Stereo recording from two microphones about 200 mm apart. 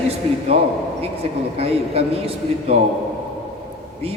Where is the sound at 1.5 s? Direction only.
30° right (ahead or behind).